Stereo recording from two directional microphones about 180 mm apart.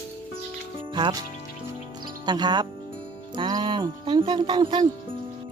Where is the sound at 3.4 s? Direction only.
25° right (ahead or behind).